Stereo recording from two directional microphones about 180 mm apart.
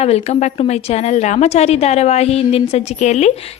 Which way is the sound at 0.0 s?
35° left (ahead or behind).